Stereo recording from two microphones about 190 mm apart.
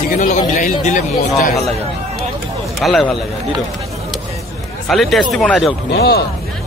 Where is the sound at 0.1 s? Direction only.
45° left (ahead or behind).